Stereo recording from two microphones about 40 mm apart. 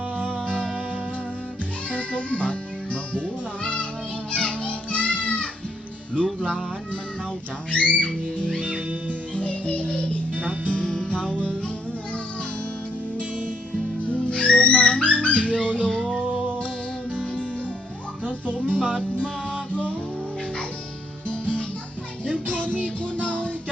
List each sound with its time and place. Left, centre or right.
1.9 s music: left
7.7 s music: left
8.6 s music: right
9.3 s music: left
10.3 s music: right
10.7 s music: left
14.3 s music: left
18.3 s music: left
18.8 s music: right
21.2 s music: left
22.7 s music: right
23.2 s music: left